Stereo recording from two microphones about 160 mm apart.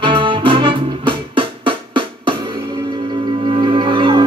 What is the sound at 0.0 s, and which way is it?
Music, 30° right (ahead or behind).